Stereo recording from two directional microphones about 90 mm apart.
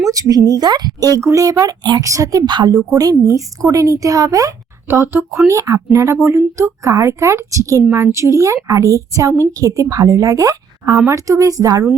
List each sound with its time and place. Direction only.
0.1 s a woman's voice: 40° right (ahead or behind)
4.9 s a woman's voice: 30° right (ahead or behind)